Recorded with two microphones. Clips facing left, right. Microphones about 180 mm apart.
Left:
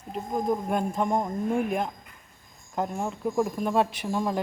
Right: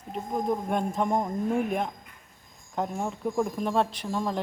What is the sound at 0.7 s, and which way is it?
Speech, centre (ahead or behind).